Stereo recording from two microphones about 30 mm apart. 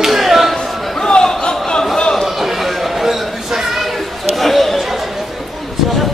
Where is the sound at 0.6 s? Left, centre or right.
Left.